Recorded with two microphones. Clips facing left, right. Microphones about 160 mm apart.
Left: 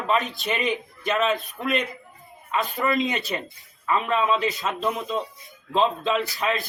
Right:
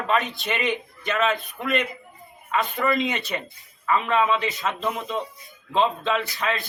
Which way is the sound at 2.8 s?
20° left (ahead or behind).